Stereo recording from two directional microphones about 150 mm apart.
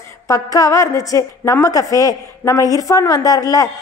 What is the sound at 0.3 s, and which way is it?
A woman's voice, 20° left (ahead or behind).